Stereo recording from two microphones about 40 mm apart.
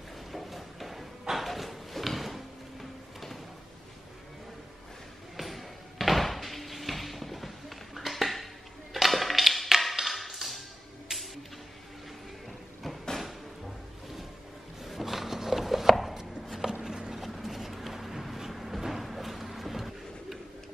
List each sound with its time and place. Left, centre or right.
0.3 s a sound: centre
5.4 s door: centre
8.9 s music: centre
9.9 s tap: centre
11.1 s music: centre
14.8 s a sound: centre
16.2 s chopping: centre
16.8 s a sound: centre
17.1 s vehicle: centre